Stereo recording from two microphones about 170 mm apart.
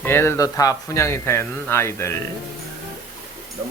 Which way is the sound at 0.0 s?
15° left (ahead or behind).